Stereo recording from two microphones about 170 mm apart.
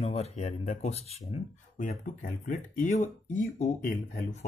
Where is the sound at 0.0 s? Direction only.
40° left (ahead or behind).